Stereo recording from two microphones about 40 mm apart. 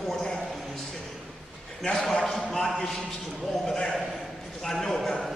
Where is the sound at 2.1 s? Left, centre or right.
Centre.